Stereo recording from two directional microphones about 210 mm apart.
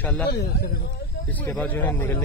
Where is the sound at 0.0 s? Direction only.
10° left (ahead or behind).